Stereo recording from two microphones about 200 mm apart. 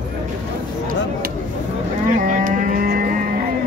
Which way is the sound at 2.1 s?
45° right (ahead or behind).